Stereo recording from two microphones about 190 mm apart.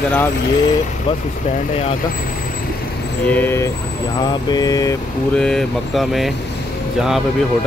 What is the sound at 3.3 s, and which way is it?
Speech, 10° left (ahead or behind).